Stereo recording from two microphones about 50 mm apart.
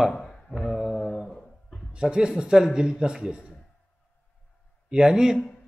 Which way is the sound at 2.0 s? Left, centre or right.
Centre.